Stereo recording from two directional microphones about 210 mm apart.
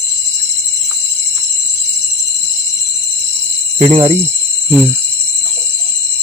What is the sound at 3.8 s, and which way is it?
Speech, 25° right (ahead or behind).